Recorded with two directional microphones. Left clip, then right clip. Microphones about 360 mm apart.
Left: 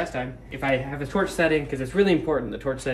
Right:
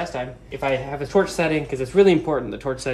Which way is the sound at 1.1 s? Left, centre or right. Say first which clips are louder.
Right 2 dB; centre.